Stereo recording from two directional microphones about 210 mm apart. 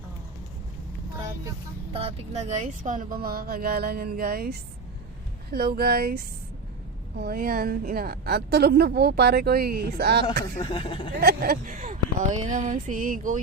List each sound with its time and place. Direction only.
1.9 s a woman's voice: 30° right (ahead or behind); by 10.2 s 50° right (ahead or behind)
10.6 s speech: 25° left (ahead or behind)
11.1 s speech: 45° right (ahead or behind)